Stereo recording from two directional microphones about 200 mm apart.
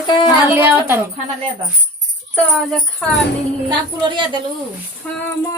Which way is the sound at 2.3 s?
5° left (ahead or behind).